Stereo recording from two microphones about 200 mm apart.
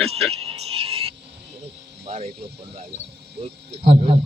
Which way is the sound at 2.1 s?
30° right (ahead or behind).